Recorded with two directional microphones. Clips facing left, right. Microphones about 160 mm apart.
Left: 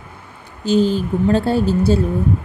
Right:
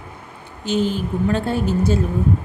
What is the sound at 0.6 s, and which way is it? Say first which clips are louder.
A woman's voice: left 5 dB; 35° left (ahead or behind).